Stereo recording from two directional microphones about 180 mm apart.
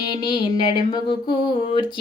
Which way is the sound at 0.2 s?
25° left (ahead or behind).